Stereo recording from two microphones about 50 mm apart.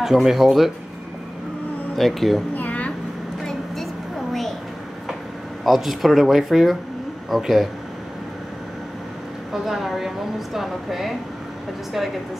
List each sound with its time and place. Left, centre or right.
0.0 s speech: centre
2.0 s speech: centre
2.5 s a sound: left
4.3 s a sound: centre
5.6 s speech: centre
9.5 s speech: centre